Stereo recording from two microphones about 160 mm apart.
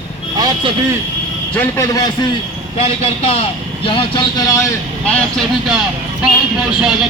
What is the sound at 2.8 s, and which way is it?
A man's voice, 40° left (ahead or behind).